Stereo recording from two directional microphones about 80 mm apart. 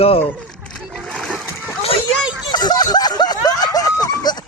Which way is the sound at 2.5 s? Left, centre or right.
Left.